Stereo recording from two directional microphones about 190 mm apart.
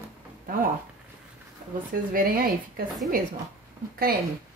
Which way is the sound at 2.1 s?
50° right (ahead or behind).